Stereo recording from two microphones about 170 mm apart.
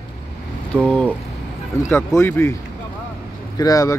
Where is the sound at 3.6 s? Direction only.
20° left (ahead or behind).